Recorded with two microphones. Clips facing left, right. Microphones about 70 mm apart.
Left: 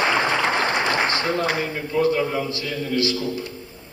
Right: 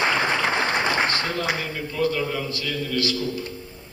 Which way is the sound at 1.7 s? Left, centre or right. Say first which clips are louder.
Left 4 dB; left.